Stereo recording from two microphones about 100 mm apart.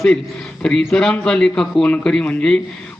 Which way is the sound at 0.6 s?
10° left (ahead or behind).